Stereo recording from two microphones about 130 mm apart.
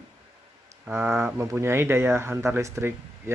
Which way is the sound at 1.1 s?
20° right (ahead or behind).